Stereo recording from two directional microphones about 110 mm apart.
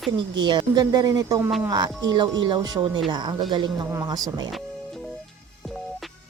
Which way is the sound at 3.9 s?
30° right (ahead or behind).